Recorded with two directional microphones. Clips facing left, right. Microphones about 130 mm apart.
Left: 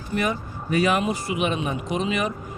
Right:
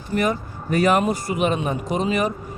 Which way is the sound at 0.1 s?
40° right (ahead or behind).